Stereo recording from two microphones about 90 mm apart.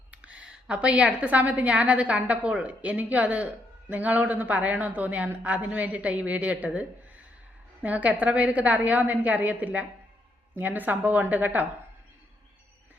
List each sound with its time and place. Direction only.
0.1 s a woman's voice: 15° right (ahead or behind)